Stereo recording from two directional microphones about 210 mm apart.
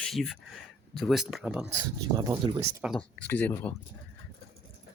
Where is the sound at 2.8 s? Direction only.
5° left (ahead or behind).